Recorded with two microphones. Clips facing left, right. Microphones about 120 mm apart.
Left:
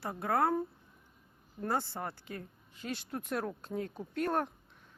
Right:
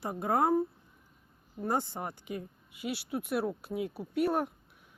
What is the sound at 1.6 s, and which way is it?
Speech, 15° right (ahead or behind).